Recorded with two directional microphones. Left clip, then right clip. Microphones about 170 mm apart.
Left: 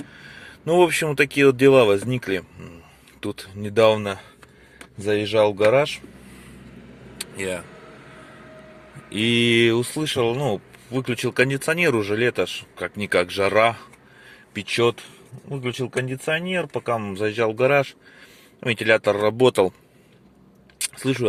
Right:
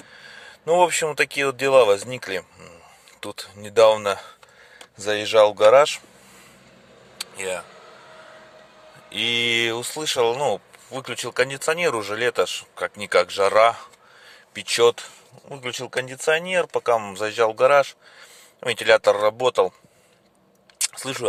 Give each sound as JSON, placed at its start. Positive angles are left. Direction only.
{"t": 0.1, "sound": "speech", "side_deg": -15}
{"t": 7.2, "sound": "a sound", "side_deg": -15}
{"t": 9.0, "sound": "speech", "side_deg": -10}
{"t": 14.8, "sound": "speech", "side_deg": -40}
{"t": 19.4, "sound": "speech", "side_deg": -5}
{"t": 20.7, "sound": "camera", "side_deg": -25}